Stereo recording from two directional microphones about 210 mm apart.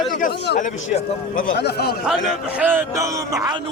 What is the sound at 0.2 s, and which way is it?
A man's voice, 45° left (ahead or behind).